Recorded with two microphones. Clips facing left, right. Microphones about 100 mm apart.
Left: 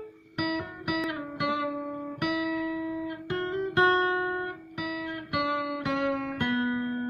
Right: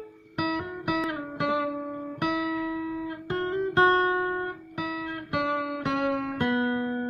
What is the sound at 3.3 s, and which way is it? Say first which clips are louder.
Guitar: right 3 dB; 35° right (ahead or behind).